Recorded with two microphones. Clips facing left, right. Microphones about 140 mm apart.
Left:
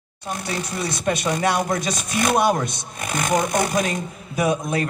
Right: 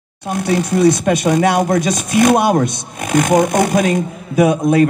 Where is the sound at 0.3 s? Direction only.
50° right (ahead or behind).